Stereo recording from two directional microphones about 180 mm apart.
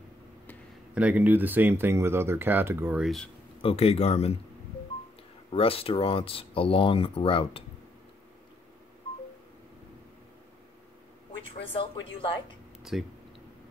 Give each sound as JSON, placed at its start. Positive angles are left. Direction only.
{"t": 0.9, "sound": "speech", "side_deg": -10}
{"t": 3.6, "sound": "speech", "side_deg": 35}
{"t": 5.5, "sound": "speech", "side_deg": 30}
{"t": 11.6, "sound": "speech", "side_deg": 30}
{"t": 12.9, "sound": "speech", "side_deg": 0}